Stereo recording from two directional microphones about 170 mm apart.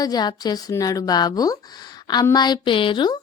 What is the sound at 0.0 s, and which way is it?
A woman's voice, 25° left (ahead or behind).